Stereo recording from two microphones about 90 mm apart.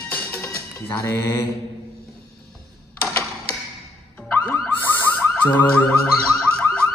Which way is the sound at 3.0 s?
30° left (ahead or behind).